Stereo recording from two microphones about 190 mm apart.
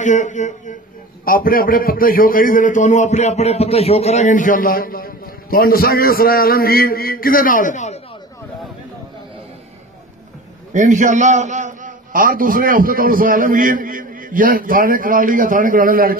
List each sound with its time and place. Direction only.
0.0 s a man's voice: 40° left (ahead or behind)
10.7 s a man's voice: 40° right (ahead or behind)